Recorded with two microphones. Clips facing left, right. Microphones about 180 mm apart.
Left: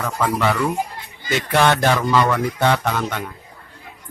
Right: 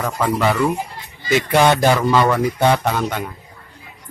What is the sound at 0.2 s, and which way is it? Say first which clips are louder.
Speech: right 2 dB; 10° right (ahead or behind).